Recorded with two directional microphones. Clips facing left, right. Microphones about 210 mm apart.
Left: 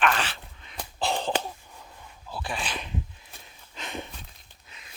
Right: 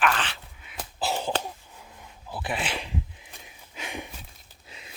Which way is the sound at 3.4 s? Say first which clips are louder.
Right 1 dB; 10° right (ahead or behind).